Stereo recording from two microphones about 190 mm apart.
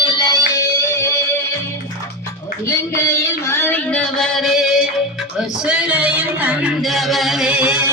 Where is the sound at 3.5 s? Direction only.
10° left (ahead or behind); by 7.8 s 5° right (ahead or behind).